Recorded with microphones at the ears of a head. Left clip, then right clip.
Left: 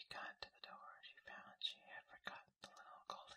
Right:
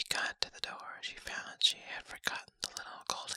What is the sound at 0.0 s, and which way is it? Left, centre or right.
Whispering, right.